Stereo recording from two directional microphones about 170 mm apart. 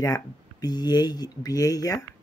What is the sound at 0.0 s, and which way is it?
Speech, 20° left (ahead or behind).